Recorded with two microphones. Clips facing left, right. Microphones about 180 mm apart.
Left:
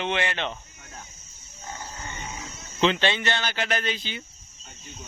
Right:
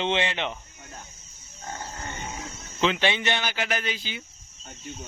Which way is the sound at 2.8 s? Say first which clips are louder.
Left 1 dB; 5° right (ahead or behind).